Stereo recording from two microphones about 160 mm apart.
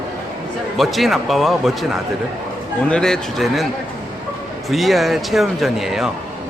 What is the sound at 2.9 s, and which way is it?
Speech, 5° left (ahead or behind).